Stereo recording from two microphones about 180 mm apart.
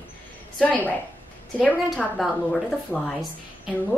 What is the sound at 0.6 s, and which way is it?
A woman's voice, 10° left (ahead or behind).